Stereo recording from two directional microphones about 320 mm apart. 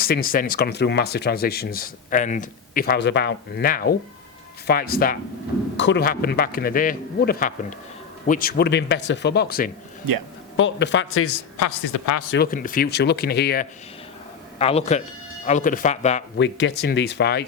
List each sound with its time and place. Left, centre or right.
0.0 s speech: left
10.1 s speech: right
10.6 s speech: left
11.6 s a man's voice: left
12.3 s speech: left
14.6 s speech: centre
16.4 s speech: left